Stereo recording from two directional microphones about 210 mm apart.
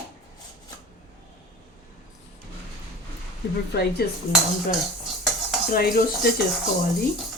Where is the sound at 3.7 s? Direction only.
50° left (ahead or behind).